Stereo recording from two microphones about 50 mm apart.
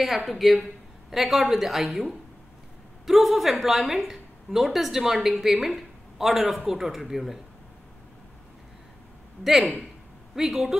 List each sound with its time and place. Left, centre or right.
0.0 s a woman's voice: centre
9.4 s a woman's voice: centre